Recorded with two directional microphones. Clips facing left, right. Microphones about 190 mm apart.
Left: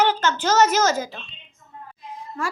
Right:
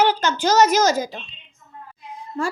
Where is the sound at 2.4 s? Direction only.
25° right (ahead or behind).